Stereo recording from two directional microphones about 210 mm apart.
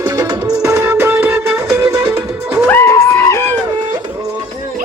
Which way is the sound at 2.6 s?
10° left (ahead or behind).